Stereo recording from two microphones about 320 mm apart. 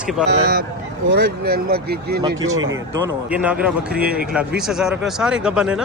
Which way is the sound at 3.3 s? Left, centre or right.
Centre.